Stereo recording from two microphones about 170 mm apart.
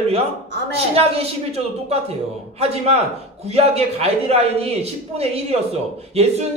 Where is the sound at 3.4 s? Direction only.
35° right (ahead or behind).